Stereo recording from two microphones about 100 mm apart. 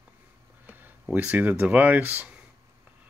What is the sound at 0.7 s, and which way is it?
Speech, 15° right (ahead or behind).